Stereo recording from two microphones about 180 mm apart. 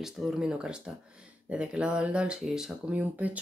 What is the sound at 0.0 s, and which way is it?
Speech, centre (ahead or behind).